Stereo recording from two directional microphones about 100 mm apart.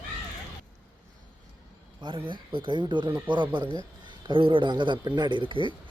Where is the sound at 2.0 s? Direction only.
55° right (ahead or behind).